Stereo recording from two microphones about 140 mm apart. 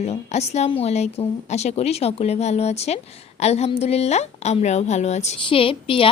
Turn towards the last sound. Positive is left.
turn(degrees=40)  # may be behind; listen again after turning